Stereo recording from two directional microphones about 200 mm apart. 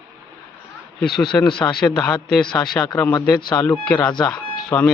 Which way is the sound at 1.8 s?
5° left (ahead or behind).